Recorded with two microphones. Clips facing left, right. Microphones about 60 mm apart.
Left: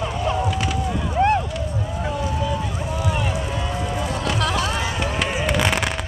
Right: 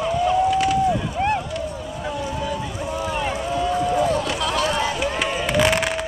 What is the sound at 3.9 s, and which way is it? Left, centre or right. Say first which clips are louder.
Music: right 6 dB; right.